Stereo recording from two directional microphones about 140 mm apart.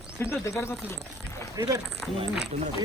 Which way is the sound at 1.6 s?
25° right (ahead or behind).